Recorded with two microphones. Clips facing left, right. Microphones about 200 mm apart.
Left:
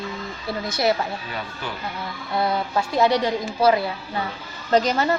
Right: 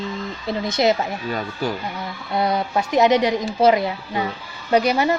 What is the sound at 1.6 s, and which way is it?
Speech, 40° right (ahead or behind).